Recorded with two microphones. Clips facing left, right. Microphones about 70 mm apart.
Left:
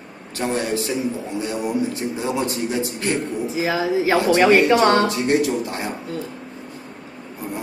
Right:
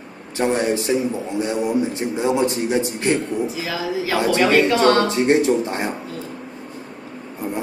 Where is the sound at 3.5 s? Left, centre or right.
Left.